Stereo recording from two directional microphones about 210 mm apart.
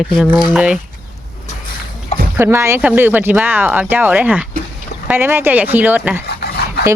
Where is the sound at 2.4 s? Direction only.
10° right (ahead or behind).